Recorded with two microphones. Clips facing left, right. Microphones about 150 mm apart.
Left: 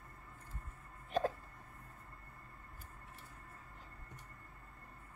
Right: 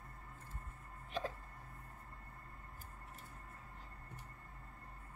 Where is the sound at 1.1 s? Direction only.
45° left (ahead or behind).